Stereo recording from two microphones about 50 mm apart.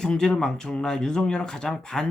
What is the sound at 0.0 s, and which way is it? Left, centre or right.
Speech, centre.